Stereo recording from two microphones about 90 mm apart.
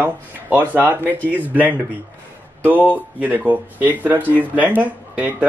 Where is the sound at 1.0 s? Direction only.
20° left (ahead or behind).